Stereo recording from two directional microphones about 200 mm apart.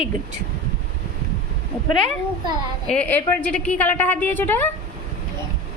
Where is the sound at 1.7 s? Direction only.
Centre (ahead or behind).